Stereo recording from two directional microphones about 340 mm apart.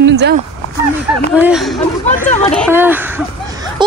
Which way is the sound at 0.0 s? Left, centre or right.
Right.